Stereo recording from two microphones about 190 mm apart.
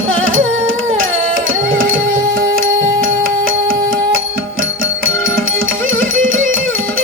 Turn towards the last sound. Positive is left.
turn(degrees=-90)